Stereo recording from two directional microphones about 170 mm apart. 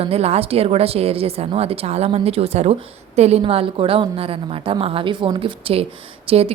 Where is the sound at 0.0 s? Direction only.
35° right (ahead or behind).